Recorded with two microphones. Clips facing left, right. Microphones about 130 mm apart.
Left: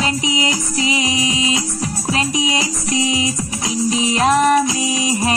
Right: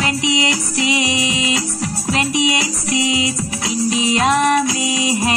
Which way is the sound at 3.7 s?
20° left (ahead or behind).